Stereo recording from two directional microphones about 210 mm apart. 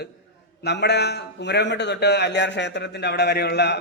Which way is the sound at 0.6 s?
55° left (ahead or behind).